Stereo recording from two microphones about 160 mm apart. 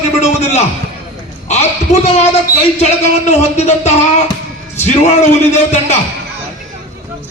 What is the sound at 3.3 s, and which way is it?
Speech, 45° left (ahead or behind).